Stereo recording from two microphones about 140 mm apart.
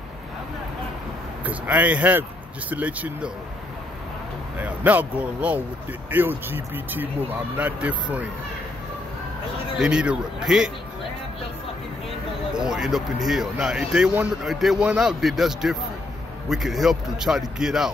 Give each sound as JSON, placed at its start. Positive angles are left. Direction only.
{"t": 1.4, "sound": "speech", "side_deg": -10}
{"t": 4.6, "sound": "speech", "side_deg": -10}
{"t": 9.8, "sound": "speech", "side_deg": -5}
{"t": 12.5, "sound": "speech", "side_deg": -5}